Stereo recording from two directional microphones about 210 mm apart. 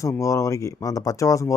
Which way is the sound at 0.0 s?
15° left (ahead or behind).